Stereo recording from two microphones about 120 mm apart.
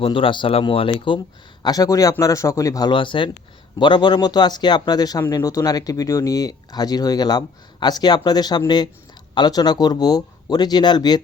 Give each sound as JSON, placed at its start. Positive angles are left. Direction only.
{"t": 0.0, "sound": "speech", "side_deg": 45}
{"t": 1.6, "sound": "a man's voice", "side_deg": 30}
{"t": 2.9, "sound": "speech", "side_deg": 45}